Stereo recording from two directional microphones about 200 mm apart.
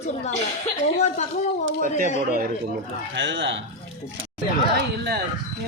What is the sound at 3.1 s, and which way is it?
Speech, 70° right (ahead or behind).